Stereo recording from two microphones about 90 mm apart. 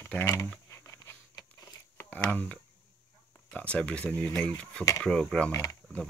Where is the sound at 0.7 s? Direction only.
30° left (ahead or behind).